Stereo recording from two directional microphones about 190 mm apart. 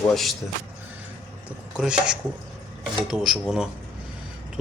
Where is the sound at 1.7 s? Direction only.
5° right (ahead or behind).